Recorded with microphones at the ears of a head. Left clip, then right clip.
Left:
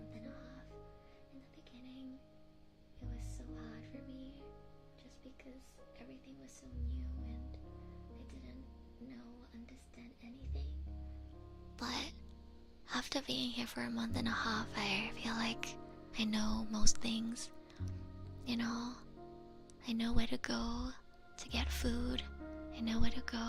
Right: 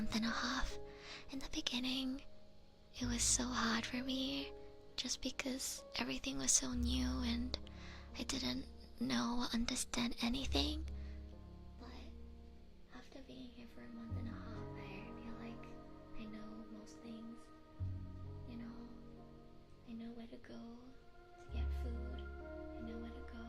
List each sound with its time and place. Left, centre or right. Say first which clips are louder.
0.0 s music: right 13 dB; right
3.0 s speech: right 18 dB; right
11.8 s speech: left 16 dB; left
18.4 s music: left 14 dB; left
19.8 s speech: left 13 dB; left